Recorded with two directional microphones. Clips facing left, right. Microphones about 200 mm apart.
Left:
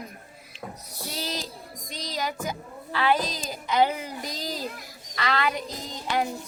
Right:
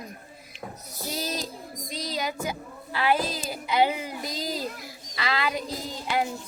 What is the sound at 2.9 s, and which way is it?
A woman's voice, 10° right (ahead or behind).